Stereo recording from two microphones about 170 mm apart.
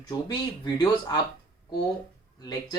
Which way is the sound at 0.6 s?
25° left (ahead or behind).